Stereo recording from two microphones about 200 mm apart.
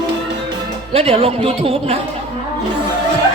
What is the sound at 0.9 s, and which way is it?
Speech, 30° right (ahead or behind).